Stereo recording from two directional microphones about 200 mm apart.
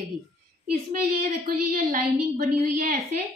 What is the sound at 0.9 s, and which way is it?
A woman's voice, 45° right (ahead or behind).